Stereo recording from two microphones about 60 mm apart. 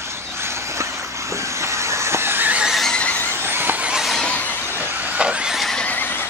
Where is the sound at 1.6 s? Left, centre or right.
Right.